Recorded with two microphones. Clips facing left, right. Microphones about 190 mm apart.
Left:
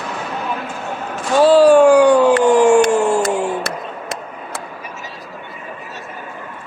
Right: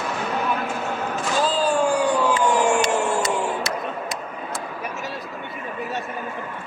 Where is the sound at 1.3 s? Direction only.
75° left (ahead or behind).